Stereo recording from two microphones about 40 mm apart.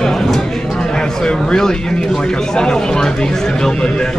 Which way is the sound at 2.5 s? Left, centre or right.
Centre.